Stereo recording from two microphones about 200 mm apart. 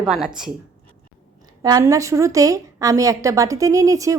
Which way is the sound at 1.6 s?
15° right (ahead or behind).